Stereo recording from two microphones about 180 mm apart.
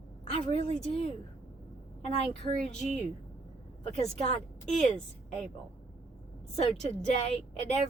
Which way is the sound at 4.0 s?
35° left (ahead or behind).